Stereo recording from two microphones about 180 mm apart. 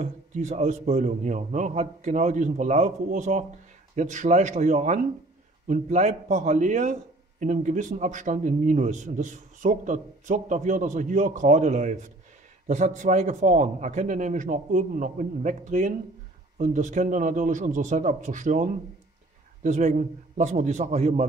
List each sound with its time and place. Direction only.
0.0 s a man's voice: 40° right (ahead or behind)